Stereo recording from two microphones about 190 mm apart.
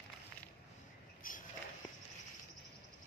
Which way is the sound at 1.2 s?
45° left (ahead or behind).